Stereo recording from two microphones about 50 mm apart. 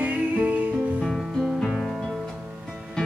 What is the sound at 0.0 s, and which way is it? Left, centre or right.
Music, right.